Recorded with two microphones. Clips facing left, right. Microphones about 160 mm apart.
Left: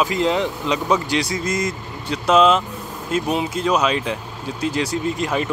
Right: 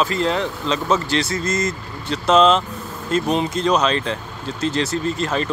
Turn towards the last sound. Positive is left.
turn(degrees=15)  # may be behind; listen again after turning